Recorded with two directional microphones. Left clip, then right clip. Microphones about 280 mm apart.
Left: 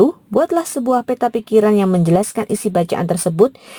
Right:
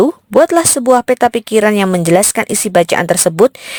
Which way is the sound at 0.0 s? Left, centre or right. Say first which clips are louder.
Right 5 dB; right.